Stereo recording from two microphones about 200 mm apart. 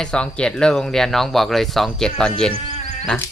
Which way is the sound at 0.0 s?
5° left (ahead or behind).